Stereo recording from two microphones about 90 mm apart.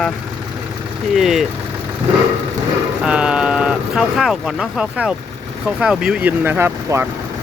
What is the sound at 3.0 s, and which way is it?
Speech, 10° right (ahead or behind).